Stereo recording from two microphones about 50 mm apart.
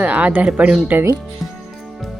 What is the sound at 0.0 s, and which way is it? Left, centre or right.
Speech, right.